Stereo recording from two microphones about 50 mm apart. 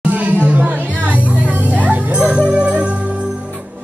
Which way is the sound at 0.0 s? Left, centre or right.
Right.